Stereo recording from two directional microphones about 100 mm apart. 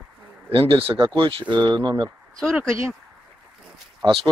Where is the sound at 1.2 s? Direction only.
55° right (ahead or behind).